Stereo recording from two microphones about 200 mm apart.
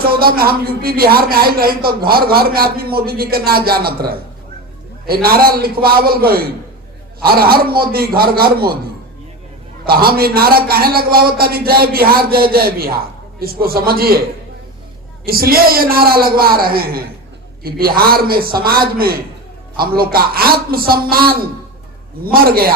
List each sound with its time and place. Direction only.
0.0 s speech: 50° right (ahead or behind)
9.8 s speech: 50° right (ahead or behind)
15.2 s speech: 50° right (ahead or behind)